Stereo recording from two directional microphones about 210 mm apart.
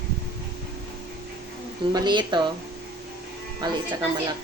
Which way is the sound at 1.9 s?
20° right (ahead or behind).